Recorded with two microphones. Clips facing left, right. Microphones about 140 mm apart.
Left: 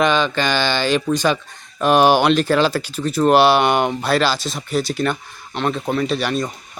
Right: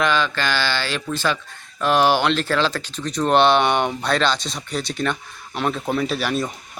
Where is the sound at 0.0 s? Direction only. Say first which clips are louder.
Left 3 dB; 20° left (ahead or behind).